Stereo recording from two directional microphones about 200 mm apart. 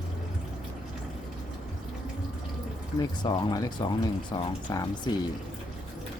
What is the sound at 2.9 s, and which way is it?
Speech, 20° left (ahead or behind).